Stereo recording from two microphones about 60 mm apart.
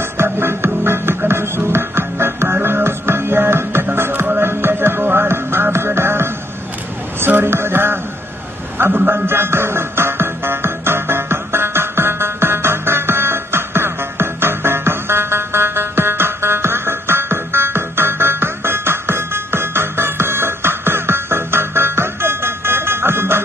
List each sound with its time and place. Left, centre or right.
0.0 s music: right
7.2 s a sound: right
8.7 s music: right